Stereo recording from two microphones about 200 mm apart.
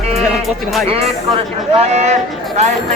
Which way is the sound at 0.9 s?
30° right (ahead or behind).